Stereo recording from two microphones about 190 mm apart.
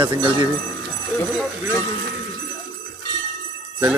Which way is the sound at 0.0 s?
25° right (ahead or behind).